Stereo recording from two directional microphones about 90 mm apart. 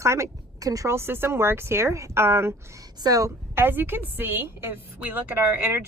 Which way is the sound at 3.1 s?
40° right (ahead or behind).